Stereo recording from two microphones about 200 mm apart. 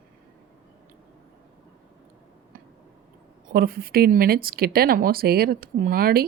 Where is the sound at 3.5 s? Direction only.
50° right (ahead or behind).